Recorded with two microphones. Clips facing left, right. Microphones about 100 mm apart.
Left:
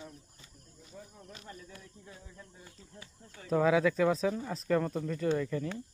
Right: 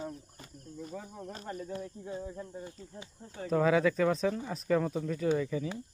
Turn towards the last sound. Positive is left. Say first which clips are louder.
# right 1 dB
turn(degrees=-5)  # may be behind; listen again after turning